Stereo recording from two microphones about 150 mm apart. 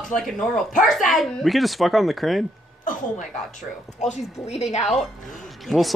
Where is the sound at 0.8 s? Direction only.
Centre (ahead or behind).